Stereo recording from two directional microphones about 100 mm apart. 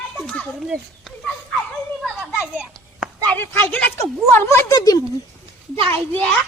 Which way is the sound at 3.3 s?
15° left (ahead or behind).